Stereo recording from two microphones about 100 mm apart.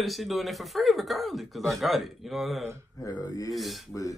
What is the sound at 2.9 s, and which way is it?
Speech, 40° left (ahead or behind).